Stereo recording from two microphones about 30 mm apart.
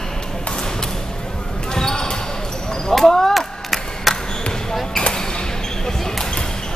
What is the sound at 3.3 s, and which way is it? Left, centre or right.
Chop, centre.